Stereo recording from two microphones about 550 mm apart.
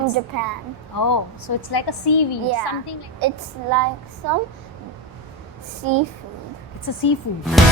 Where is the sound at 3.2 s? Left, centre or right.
Right.